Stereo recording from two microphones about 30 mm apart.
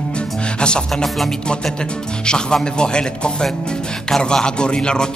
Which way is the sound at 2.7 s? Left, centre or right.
Left.